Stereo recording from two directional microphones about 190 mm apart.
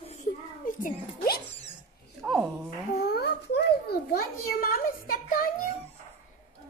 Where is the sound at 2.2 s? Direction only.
Centre (ahead or behind).